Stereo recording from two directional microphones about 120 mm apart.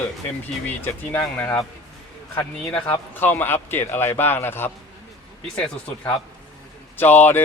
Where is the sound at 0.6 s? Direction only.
15° left (ahead or behind).